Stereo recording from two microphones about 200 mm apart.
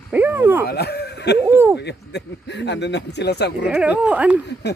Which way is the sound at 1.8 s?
60° left (ahead or behind).